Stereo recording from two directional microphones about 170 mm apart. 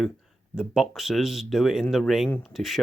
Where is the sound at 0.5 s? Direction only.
5° right (ahead or behind).